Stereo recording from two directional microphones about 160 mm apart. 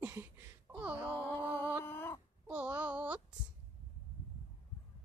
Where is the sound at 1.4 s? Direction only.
10° right (ahead or behind).